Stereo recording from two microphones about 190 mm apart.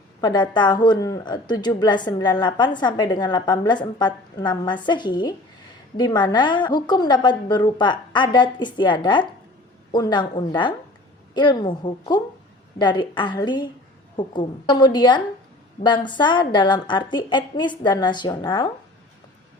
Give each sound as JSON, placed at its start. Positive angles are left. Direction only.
{"t": 0.2, "sound": "a woman's voice", "side_deg": 20}